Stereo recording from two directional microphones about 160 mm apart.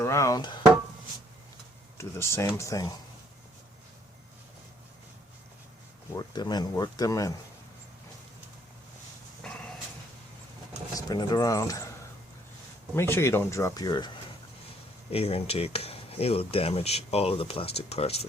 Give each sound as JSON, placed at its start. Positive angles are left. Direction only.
{"t": 0.0, "sound": "speech", "side_deg": 20}
{"t": 2.0, "sound": "speech", "side_deg": 15}
{"t": 6.1, "sound": "speech", "side_deg": 25}
{"t": 9.4, "sound": "dog", "side_deg": 5}
{"t": 10.9, "sound": "speech", "side_deg": 25}
{"t": 13.0, "sound": "speech", "side_deg": 15}
{"t": 15.1, "sound": "speech", "side_deg": 40}